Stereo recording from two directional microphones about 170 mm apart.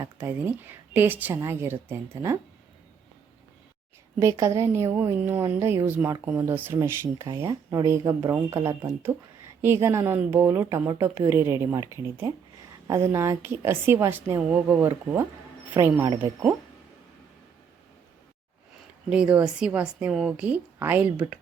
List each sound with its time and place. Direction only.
0.0 s speech: 10° right (ahead or behind)
4.2 s speech: 15° right (ahead or behind)
19.1 s speech: 5° right (ahead or behind)